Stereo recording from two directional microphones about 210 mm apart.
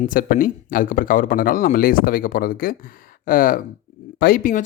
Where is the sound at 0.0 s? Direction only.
40° left (ahead or behind).